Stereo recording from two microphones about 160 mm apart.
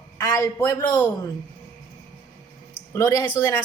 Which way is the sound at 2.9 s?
20° left (ahead or behind).